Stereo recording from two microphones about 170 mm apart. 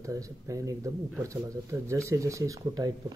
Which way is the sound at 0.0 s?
20° right (ahead or behind).